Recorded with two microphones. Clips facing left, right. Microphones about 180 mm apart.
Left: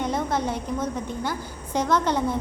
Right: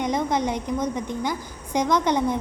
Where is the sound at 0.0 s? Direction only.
15° right (ahead or behind).